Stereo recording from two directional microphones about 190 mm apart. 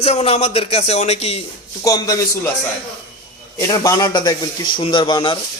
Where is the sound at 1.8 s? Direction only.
20° left (ahead or behind).